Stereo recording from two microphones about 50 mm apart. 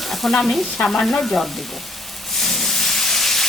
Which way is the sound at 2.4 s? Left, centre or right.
Centre.